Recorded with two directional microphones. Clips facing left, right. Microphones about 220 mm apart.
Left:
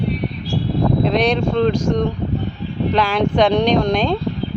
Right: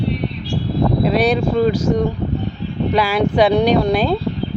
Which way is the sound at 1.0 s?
5° right (ahead or behind).